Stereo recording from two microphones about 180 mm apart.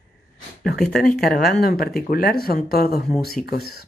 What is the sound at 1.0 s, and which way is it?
Speech, 55° left (ahead or behind).